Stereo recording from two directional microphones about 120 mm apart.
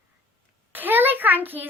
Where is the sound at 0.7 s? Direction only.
15° right (ahead or behind).